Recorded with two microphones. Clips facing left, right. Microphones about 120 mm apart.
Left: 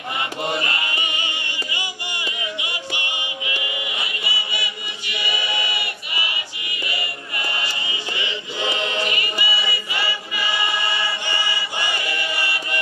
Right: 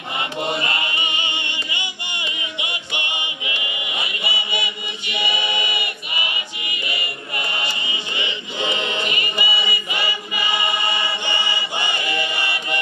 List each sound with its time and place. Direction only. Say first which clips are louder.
0.2 s music: right 1 dB; 20° right (ahead or behind)